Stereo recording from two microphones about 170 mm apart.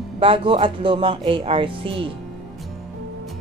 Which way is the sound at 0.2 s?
30° right (ahead or behind).